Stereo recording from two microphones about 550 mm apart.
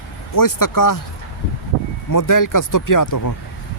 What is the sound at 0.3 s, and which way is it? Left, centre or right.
Speech, left.